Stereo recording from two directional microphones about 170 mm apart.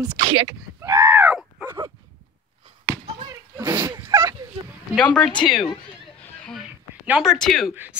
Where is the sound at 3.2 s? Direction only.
20° right (ahead or behind).